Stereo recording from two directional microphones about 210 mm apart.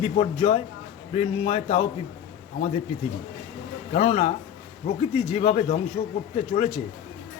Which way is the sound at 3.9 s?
30° left (ahead or behind).